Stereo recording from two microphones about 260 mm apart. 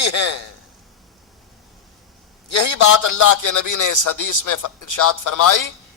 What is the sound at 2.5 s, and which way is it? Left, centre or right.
Speech, left.